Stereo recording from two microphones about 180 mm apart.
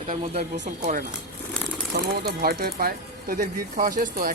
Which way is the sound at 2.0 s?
60° right (ahead or behind).